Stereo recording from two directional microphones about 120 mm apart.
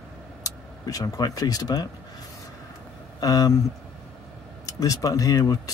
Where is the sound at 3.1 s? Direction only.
30° left (ahead or behind).